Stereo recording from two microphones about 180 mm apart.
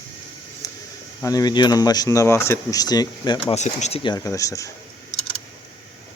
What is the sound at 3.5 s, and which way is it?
Speech, 40° left (ahead or behind).